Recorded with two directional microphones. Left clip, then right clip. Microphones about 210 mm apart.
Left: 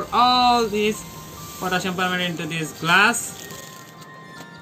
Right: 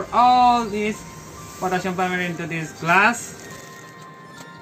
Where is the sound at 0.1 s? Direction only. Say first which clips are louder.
Right 2 dB; 15° left (ahead or behind).